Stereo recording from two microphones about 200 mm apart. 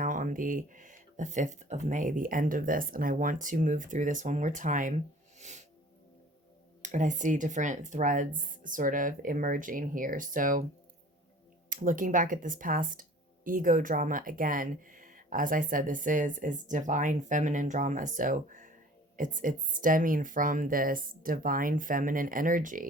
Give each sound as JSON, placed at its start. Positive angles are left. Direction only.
{"t": 0.0, "sound": "speech", "side_deg": -40}
{"t": 5.4, "sound": "music", "side_deg": -35}
{"t": 6.8, "sound": "speech", "side_deg": -40}
{"t": 11.7, "sound": "speech", "side_deg": -40}